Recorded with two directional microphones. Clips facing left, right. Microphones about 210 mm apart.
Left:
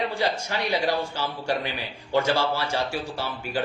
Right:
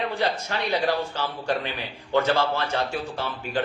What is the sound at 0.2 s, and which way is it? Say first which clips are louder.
Speech: even; 10° left (ahead or behind).